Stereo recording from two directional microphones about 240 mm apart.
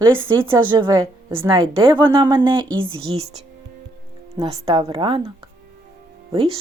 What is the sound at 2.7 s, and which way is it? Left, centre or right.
Speech, right.